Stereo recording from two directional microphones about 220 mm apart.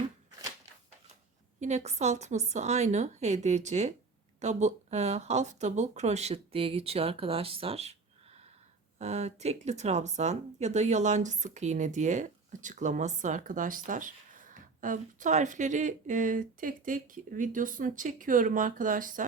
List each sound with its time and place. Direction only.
1.6 s speech: 30° right (ahead or behind)
9.0 s speech: 30° right (ahead or behind)